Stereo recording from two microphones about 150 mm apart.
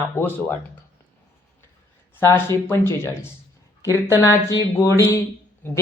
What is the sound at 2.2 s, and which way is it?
Speech, 15° left (ahead or behind).